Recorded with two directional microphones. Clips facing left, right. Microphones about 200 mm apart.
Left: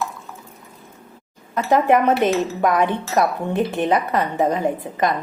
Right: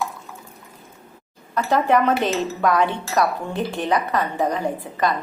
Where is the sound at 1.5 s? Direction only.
20° left (ahead or behind).